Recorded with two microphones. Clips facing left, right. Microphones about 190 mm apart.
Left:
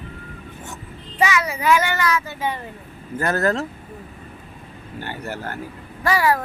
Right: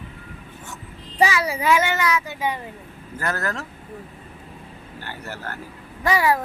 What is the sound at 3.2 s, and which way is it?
Speech, 25° left (ahead or behind).